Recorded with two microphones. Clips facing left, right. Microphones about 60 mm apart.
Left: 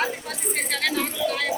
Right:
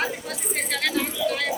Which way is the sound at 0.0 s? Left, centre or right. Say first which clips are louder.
Left 1 dB; centre.